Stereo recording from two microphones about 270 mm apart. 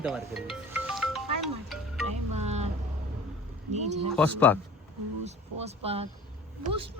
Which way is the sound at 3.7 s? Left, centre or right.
Right.